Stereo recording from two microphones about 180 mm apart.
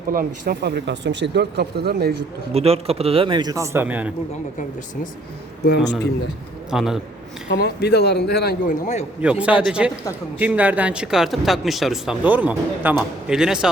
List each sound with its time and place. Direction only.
0.1 s speech: 55° right (ahead or behind)
2.5 s speech: 35° right (ahead or behind); by 4.1 s 10° right (ahead or behind)
5.6 s speech: 75° left (ahead or behind)
6.7 s a man's voice: centre (ahead or behind)
7.5 s speech: 70° left (ahead or behind)
9.2 s a man's voice: 5° right (ahead or behind)